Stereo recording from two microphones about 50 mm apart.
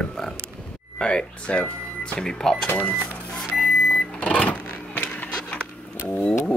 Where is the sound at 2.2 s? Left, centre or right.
Centre.